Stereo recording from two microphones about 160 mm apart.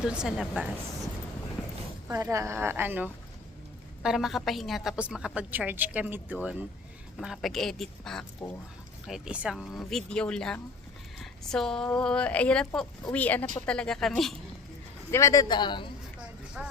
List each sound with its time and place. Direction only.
0.0 s speech: 5° right (ahead or behind)
2.0 s a woman's voice: 20° right (ahead or behind); by 14.3 s centre (ahead or behind)
15.1 s a man's voice: 20° left (ahead or behind)
16.6 s speech: 5° right (ahead or behind)